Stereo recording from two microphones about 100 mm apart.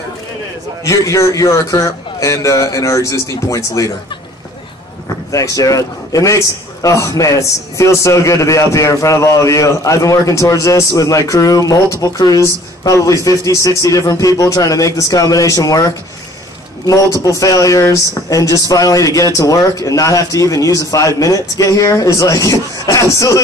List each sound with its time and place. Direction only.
0.8 s a man's voice: 30° left (ahead or behind)
5.3 s a man's voice: 35° left (ahead or behind)
16.8 s a man's voice: 35° left (ahead or behind)